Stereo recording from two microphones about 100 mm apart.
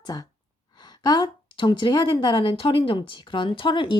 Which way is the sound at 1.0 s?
45° left (ahead or behind).